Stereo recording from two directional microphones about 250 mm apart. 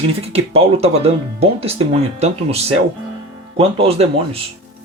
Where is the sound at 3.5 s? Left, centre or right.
Right.